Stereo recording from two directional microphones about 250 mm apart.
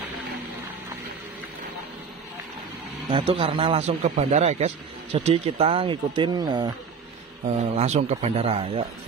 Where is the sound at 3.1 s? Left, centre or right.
Right.